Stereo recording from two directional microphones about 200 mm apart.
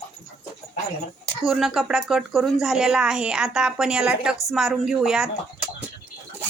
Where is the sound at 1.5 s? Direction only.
Centre (ahead or behind).